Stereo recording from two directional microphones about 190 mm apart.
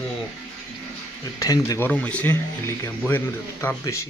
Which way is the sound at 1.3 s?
20° left (ahead or behind).